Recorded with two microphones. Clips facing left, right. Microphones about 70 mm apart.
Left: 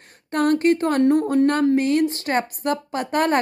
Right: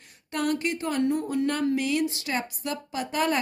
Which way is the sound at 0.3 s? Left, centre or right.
Left.